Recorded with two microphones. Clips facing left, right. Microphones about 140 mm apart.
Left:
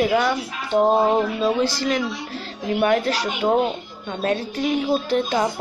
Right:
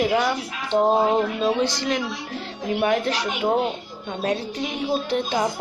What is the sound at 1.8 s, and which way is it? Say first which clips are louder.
A woman's voice: left 2 dB; 15° right (ahead or behind).